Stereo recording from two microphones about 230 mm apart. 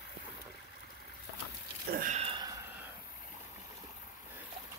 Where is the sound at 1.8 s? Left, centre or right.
Right.